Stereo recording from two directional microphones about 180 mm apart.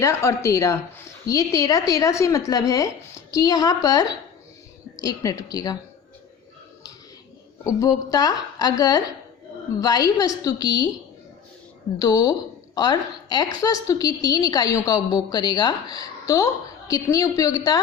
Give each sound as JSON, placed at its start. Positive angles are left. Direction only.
{"t": 0.0, "sound": "a woman's voice", "side_deg": 15}
{"t": 7.6, "sound": "a woman's voice", "side_deg": 20}
{"t": 11.9, "sound": "a woman's voice", "side_deg": 20}